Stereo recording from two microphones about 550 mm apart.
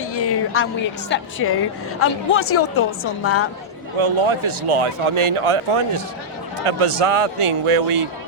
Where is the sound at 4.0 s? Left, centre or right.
Right.